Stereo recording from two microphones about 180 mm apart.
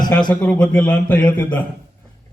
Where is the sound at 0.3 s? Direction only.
5° left (ahead or behind).